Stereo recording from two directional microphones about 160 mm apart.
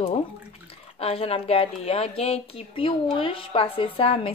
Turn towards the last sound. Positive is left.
turn(degrees=35)  # may be behind; listen again after turning